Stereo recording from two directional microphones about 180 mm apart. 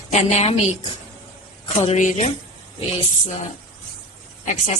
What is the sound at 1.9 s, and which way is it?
Speech, 45° left (ahead or behind).